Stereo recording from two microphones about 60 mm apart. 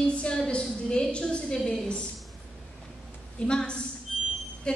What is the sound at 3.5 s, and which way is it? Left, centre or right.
Speech, centre.